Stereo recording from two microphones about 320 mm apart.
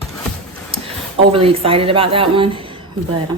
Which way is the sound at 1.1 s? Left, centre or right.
Centre.